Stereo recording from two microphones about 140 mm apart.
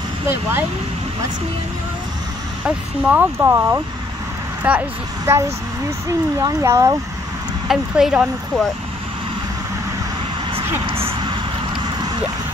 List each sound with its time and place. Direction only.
0.3 s speech: 15° right (ahead or behind)
2.6 s speech: 10° right (ahead or behind)
6.4 s speech: 25° right (ahead or behind)
7.6 s speech: centre (ahead or behind)
10.9 s a sound: 40° right (ahead or behind)